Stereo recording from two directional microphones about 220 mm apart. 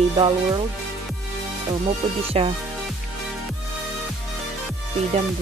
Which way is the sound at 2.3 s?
25° right (ahead or behind).